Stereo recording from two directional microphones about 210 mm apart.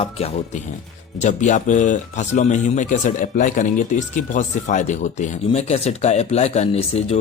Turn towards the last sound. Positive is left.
turn(degrees=30)  # may be behind; listen again after turning